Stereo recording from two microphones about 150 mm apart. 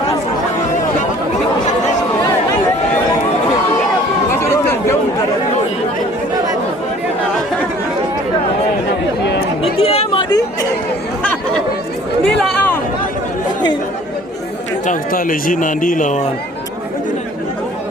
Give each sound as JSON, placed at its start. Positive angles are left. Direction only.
{"t": 4.4, "sound": "chatter", "side_deg": 15}
{"t": 9.7, "sound": "chatter", "side_deg": 40}
{"t": 12.4, "sound": "a sound", "side_deg": 5}
{"t": 14.8, "sound": "speech", "side_deg": 70}